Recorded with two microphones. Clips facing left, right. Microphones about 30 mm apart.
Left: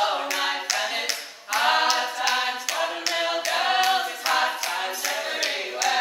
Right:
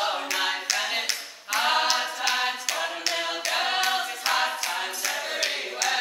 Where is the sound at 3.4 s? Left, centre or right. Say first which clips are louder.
Left 3 dB; centre.